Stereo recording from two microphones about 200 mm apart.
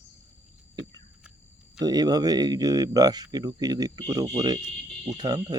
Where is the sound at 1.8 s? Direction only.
20° right (ahead or behind).